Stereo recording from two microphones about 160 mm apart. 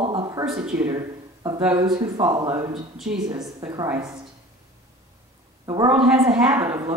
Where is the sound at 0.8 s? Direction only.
25° right (ahead or behind).